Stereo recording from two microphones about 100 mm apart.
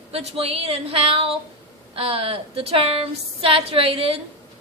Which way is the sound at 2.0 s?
75° right (ahead or behind).